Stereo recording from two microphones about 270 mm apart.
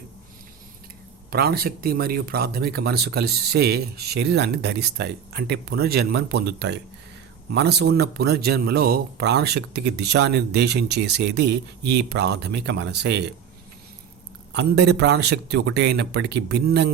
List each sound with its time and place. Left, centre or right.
1.3 s speech: right
14.5 s speech: right